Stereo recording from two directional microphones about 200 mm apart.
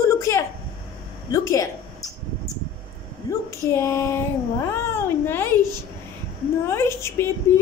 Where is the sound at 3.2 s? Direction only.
15° left (ahead or behind).